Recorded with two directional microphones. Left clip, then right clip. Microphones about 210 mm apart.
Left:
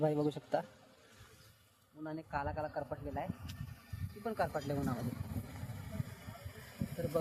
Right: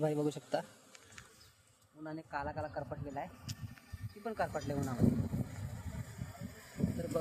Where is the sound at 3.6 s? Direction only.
50° left (ahead or behind).